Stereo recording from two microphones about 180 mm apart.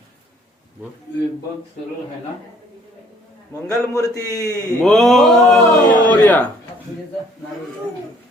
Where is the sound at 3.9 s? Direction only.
15° left (ahead or behind).